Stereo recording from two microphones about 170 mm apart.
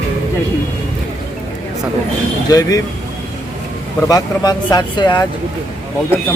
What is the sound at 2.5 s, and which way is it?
Speech, 20° left (ahead or behind).